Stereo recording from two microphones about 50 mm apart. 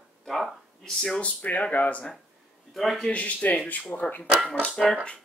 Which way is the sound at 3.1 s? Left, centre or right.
Left.